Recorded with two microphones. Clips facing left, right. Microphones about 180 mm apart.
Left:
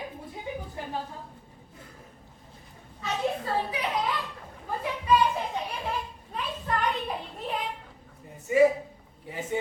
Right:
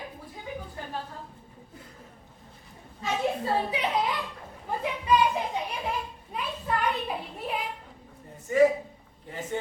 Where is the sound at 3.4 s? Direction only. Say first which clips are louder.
Right 2 dB; 25° right (ahead or behind).